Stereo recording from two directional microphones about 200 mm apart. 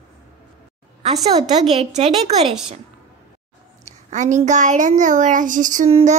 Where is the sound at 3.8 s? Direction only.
35° right (ahead or behind).